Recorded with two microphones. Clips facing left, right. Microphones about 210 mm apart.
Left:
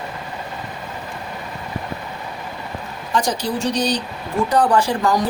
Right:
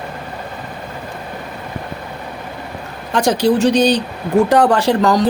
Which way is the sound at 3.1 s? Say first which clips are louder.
Right 7 dB; 70° right (ahead or behind).